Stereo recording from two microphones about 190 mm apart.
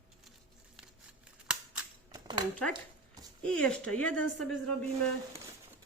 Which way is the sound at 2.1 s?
20° right (ahead or behind).